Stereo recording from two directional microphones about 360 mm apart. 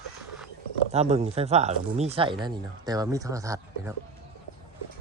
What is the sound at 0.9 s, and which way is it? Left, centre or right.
Speech, centre.